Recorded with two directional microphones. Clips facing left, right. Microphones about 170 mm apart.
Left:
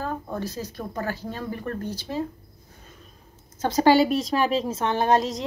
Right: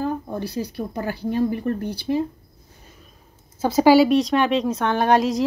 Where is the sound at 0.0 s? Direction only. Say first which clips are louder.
Right 4 dB; 10° right (ahead or behind).